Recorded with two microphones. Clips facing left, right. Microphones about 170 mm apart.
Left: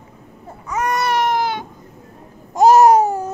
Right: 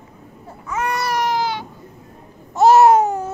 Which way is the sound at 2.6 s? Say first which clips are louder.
Left 1 dB; 40° left (ahead or behind).